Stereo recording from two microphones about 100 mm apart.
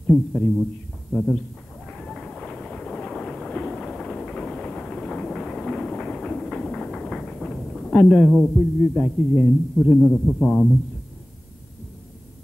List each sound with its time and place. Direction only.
0.1 s a man's voice: 5° left (ahead or behind)
1.9 s train: 5° left (ahead or behind)